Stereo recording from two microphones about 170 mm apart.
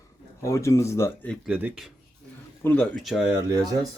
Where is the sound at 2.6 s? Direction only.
10° left (ahead or behind).